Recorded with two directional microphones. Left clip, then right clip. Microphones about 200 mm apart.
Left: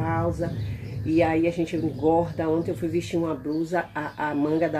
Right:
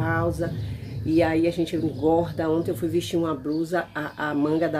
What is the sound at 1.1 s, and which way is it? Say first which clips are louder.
Speech: right 1 dB; 10° right (ahead or behind).